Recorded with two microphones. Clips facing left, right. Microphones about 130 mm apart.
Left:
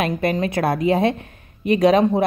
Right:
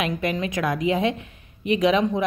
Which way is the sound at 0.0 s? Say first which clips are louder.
Left 4 dB; 40° left (ahead or behind).